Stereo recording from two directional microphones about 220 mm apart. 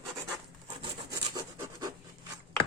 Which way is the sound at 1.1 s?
15° right (ahead or behind).